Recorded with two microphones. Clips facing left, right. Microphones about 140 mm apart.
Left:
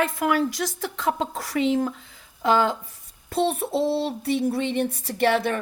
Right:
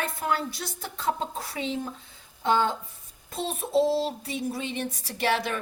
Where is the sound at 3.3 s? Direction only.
70° left (ahead or behind).